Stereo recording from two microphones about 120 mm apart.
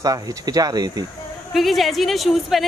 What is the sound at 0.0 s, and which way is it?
Speech, 30° right (ahead or behind).